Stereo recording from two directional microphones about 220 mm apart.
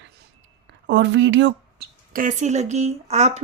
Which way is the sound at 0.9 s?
55° right (ahead or behind).